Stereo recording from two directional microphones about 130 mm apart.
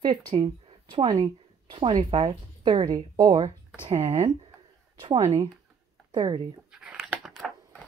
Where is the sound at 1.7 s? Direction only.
40° right (ahead or behind).